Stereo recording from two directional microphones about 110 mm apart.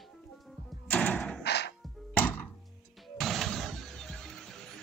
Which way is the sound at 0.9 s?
10° left (ahead or behind).